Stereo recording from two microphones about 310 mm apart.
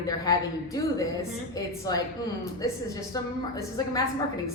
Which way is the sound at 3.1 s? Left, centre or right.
Centre.